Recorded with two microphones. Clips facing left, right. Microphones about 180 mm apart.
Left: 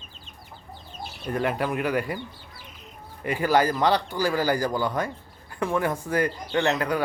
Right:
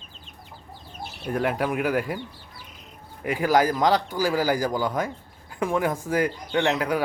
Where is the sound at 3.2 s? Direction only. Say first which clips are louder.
Right 1 dB; 10° right (ahead or behind).